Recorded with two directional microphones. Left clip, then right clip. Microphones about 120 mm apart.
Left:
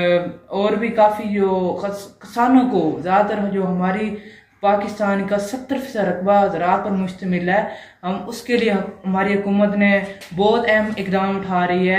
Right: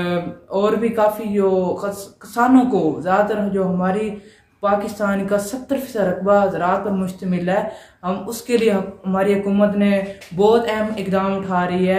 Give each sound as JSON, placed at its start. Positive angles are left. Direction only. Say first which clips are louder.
{"t": 0.0, "sound": "speech", "louder": "left 6 dB", "side_deg": -40}